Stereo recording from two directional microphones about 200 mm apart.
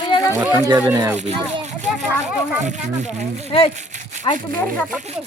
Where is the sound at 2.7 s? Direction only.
35° right (ahead or behind).